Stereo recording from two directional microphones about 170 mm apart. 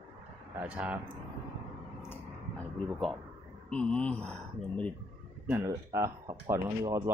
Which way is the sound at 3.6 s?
5° left (ahead or behind).